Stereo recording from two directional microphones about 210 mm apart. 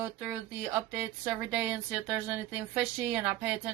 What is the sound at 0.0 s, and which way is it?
Speech, 5° right (ahead or behind).